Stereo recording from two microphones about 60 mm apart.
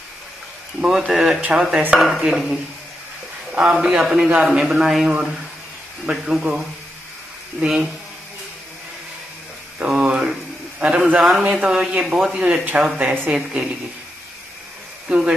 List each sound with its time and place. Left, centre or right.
0.7 s a man's voice: centre
3.6 s a man's voice: centre
7.6 s a man's voice: centre
9.8 s a man's voice: centre
15.0 s a man's voice: centre